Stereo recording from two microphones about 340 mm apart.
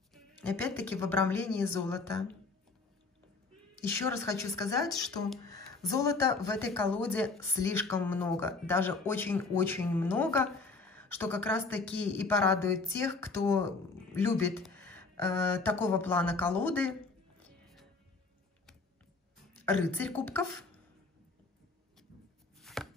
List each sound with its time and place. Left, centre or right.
0.1 s speech: centre
3.9 s speech: centre
19.6 s speech: centre
22.6 s chopping: centre